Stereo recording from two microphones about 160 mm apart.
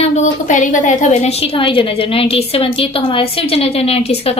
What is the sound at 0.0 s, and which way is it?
A woman's voice, 45° left (ahead or behind).